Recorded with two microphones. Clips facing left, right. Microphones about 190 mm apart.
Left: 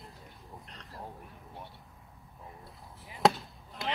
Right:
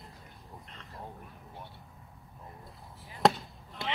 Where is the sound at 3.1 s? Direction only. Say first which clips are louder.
Even; centre (ahead or behind).